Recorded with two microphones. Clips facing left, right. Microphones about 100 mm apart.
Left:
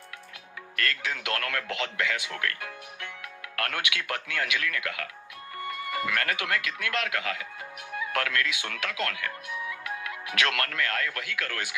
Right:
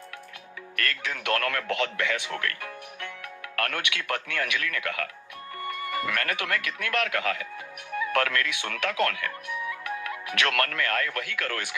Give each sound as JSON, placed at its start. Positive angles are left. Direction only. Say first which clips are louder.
{"t": 0.8, "sound": "speech", "louder": "left 1 dB", "side_deg": -45}
{"t": 5.6, "sound": "music", "louder": "right 1 dB", "side_deg": -45}
{"t": 6.2, "sound": "speech", "louder": "even", "side_deg": -45}